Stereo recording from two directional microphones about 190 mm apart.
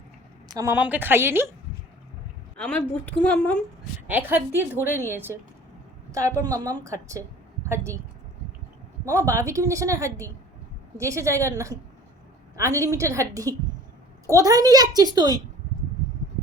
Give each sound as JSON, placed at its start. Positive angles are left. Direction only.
{"t": 0.4, "sound": "a woman's voice", "side_deg": -20}
{"t": 2.6, "sound": "a woman's voice", "side_deg": 5}
{"t": 4.0, "sound": "a woman's voice", "side_deg": -10}
{"t": 6.1, "sound": "a woman's voice", "side_deg": -15}
{"t": 9.0, "sound": "a woman's voice", "side_deg": -15}